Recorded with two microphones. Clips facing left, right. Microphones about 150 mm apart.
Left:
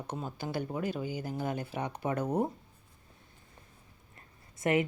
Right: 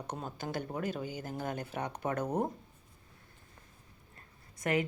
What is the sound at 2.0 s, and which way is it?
Speech, 50° right (ahead or behind).